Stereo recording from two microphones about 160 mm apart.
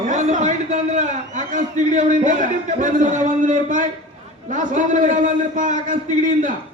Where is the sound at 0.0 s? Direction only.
50° right (ahead or behind).